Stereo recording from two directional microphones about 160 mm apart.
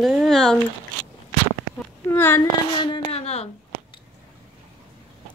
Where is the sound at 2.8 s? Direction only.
35° left (ahead or behind).